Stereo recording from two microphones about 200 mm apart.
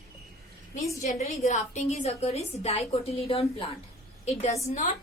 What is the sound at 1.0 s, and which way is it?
A woman's voice, 35° left (ahead or behind).